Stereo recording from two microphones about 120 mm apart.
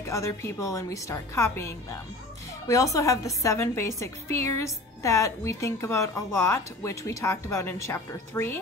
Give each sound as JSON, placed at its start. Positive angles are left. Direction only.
{"t": 0.0, "sound": "a woman's voice", "side_deg": 25}